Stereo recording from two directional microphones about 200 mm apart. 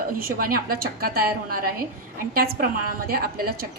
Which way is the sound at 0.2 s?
45° right (ahead or behind).